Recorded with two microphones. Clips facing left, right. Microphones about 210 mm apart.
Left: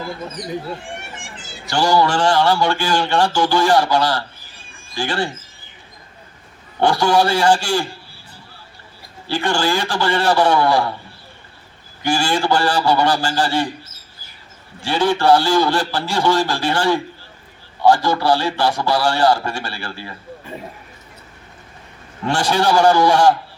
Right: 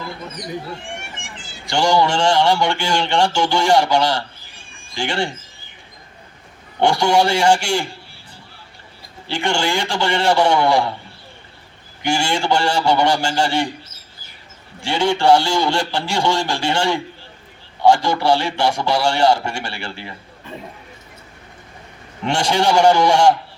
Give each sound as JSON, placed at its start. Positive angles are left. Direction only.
{"t": 1.7, "sound": "speech", "side_deg": -25}
{"t": 6.7, "sound": "a man's voice", "side_deg": -20}
{"t": 9.2, "sound": "speech", "side_deg": -20}
{"t": 12.0, "sound": "speech", "side_deg": -25}
{"t": 14.8, "sound": "speech", "side_deg": -25}
{"t": 22.2, "sound": "speech", "side_deg": -25}